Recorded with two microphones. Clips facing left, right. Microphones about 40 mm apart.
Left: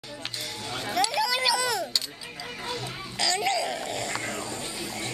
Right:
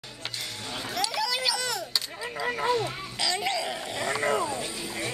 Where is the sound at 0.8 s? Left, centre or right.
Centre.